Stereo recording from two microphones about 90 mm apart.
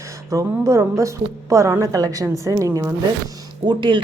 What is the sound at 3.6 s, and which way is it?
Speech, 60° right (ahead or behind).